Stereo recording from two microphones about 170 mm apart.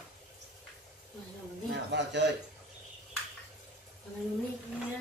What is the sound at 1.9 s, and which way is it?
Speech, 90° right.